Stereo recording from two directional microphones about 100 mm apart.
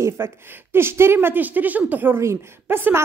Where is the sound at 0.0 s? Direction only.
25° right (ahead or behind).